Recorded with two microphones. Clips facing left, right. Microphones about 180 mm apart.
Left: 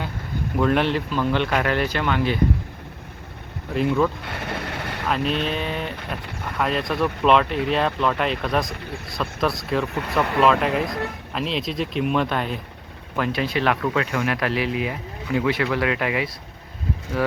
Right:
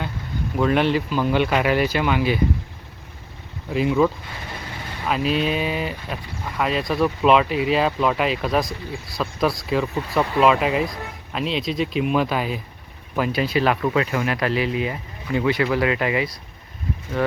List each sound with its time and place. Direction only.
0.5 s speech: centre (ahead or behind)
3.7 s speech: centre (ahead or behind)
4.2 s vehicle: 70° left (ahead or behind)
5.0 s speech: 5° right (ahead or behind)
9.9 s speech: 65° left (ahead or behind)
10.4 s speech: 5° right (ahead or behind)